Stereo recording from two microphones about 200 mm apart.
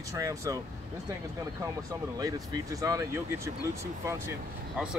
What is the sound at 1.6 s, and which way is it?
Speech, 15° right (ahead or behind).